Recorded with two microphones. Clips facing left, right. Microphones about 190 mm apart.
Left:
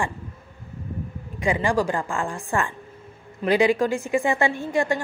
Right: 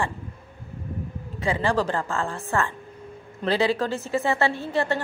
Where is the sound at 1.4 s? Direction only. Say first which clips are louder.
Left 2 dB; 15° left (ahead or behind).